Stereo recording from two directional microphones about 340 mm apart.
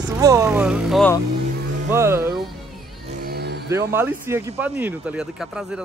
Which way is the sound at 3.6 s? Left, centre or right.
Centre.